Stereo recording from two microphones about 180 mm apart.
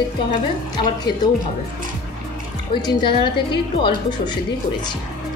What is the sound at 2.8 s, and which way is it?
A woman's voice, 25° left (ahead or behind).